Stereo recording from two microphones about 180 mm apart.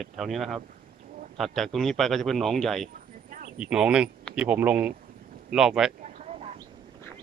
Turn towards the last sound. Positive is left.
turn(degrees=-40)  # may be behind; listen again after turning